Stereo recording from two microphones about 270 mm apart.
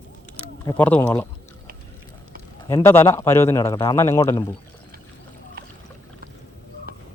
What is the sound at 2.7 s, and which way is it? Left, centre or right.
A man's voice, centre.